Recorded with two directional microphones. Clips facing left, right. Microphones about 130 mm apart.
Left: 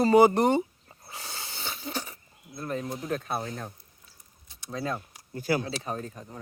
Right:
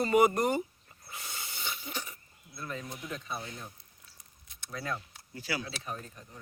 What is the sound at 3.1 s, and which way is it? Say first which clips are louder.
Speech: left 8 dB; 55° left (ahead or behind).